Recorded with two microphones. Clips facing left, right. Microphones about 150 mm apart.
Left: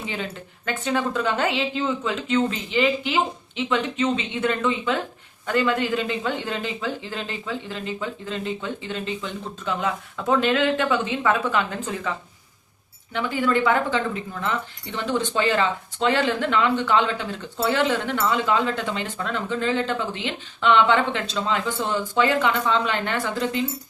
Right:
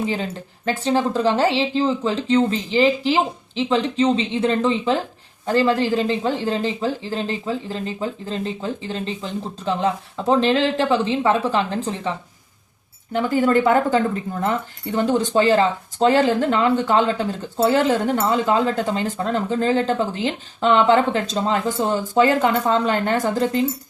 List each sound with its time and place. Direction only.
0.0 s speech: 35° right (ahead or behind)
13.1 s speech: 40° right (ahead or behind)